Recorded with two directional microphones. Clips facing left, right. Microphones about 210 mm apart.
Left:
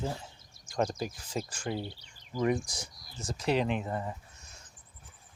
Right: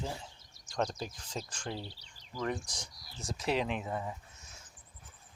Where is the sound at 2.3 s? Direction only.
10° left (ahead or behind).